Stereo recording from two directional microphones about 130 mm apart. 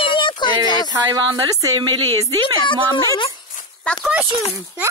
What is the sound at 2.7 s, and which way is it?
Speech, 40° left (ahead or behind).